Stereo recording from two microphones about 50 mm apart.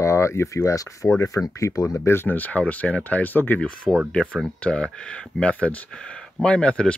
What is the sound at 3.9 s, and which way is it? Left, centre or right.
Speech, centre.